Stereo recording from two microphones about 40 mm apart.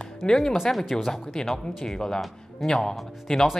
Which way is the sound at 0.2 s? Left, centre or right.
Left.